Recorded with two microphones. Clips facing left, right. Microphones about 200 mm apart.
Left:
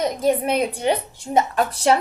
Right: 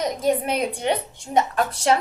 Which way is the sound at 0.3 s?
5° left (ahead or behind).